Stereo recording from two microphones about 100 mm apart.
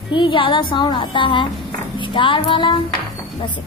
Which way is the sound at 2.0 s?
55° left (ahead or behind).